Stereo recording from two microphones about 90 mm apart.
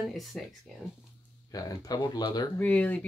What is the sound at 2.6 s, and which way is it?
Speech, 15° left (ahead or behind).